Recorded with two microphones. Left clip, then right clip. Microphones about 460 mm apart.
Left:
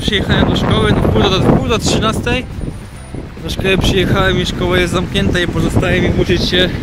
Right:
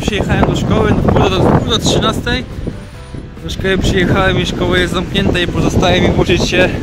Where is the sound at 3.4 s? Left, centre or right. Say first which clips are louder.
Left 1 dB; centre.